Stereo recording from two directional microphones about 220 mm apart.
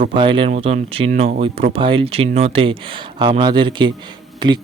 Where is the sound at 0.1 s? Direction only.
20° right (ahead or behind).